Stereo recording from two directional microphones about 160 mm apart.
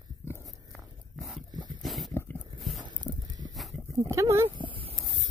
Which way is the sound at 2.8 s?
25° right (ahead or behind).